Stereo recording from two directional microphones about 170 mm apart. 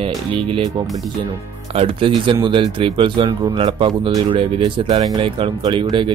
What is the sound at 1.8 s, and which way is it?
Speech, 30° right (ahead or behind).